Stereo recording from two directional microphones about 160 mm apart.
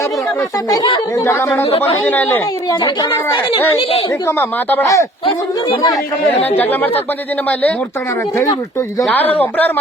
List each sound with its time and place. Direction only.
0.7 s speech: 25° left (ahead or behind)
1.1 s speech: 15° left (ahead or behind)
1.6 s speech: 40° left (ahead or behind)
2.0 s speech: 10° left (ahead or behind)
2.6 s speech: 25° left (ahead or behind)
4.3 s speech: 15° left (ahead or behind)
6.6 s speech: 10° left (ahead or behind)
9.3 s speech: 10° left (ahead or behind)